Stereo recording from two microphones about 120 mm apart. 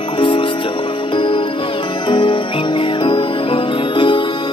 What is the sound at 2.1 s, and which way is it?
Music, 45° left (ahead or behind).